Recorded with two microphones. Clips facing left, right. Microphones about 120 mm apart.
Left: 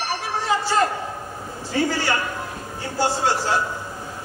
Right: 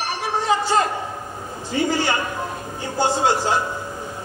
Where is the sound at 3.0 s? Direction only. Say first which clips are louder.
Right 2 dB; 20° right (ahead or behind).